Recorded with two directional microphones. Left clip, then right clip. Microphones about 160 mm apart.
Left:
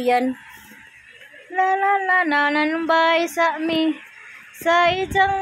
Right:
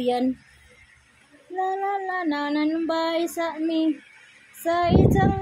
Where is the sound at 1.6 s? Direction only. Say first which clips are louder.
Left 7 dB; 20° right (ahead or behind).